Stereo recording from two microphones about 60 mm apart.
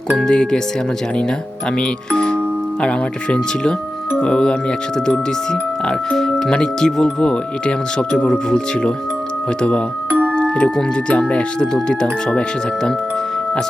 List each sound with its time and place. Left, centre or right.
0.2 s speech: centre
1.7 s speech: centre
10.1 s music: right
10.3 s speech: centre